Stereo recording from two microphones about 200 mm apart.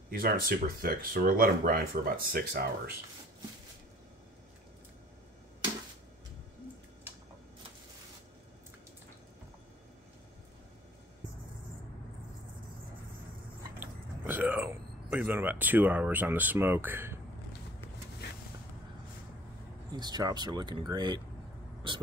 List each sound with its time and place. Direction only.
0.1 s speech: 45° right (ahead or behind)
13.7 s a sound: 10° right (ahead or behind)
18.2 s vehicle: 55° left (ahead or behind)
19.9 s speech: 20° right (ahead or behind)